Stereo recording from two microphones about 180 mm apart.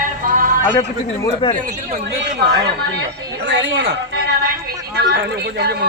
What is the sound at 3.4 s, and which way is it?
Speech, 90° right.